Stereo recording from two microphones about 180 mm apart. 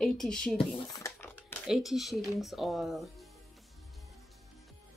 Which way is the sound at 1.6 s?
Centre (ahead or behind).